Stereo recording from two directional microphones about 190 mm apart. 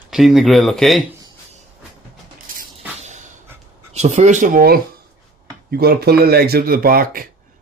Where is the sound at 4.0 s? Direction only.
35° right (ahead or behind).